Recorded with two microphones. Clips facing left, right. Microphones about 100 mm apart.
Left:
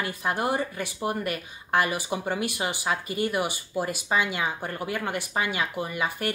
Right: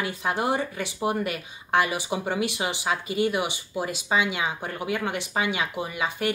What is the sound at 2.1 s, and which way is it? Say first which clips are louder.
A woman's voice: right 2 dB; 5° right (ahead or behind).